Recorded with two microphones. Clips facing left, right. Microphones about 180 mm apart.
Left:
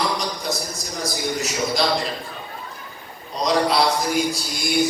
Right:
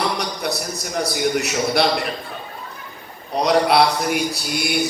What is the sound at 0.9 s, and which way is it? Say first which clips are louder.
A man's voice: right 5 dB; 65° right (ahead or behind).